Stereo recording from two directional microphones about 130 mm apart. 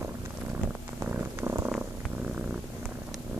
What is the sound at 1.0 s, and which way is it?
Purr, 15° right (ahead or behind).